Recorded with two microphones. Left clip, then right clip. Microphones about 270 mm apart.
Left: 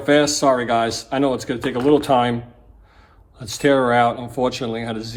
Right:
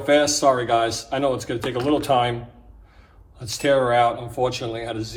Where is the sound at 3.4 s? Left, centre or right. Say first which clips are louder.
Left 2 dB; left.